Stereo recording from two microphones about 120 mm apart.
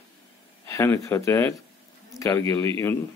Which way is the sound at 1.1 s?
20° left (ahead or behind).